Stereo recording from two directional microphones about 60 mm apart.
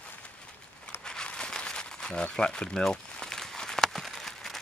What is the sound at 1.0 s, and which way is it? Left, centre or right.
Crumpling, centre.